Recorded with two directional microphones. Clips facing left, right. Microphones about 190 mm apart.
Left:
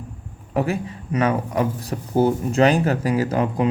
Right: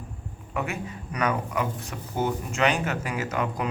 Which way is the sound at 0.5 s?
35° left (ahead or behind).